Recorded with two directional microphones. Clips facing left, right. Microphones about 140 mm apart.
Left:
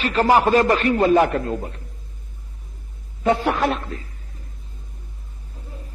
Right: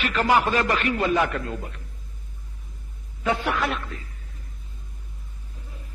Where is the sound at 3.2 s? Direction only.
35° left (ahead or behind).